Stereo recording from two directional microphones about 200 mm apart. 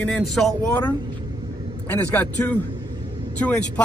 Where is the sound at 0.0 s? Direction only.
Centre (ahead or behind).